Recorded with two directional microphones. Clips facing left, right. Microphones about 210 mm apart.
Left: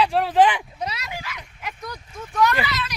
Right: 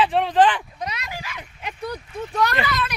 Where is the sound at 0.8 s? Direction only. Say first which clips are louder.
Left 1 dB; 30° left (ahead or behind).